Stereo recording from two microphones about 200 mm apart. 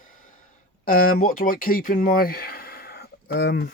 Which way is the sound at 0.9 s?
45° left (ahead or behind).